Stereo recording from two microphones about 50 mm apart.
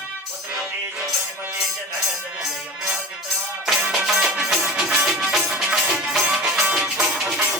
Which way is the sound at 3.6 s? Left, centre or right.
Centre.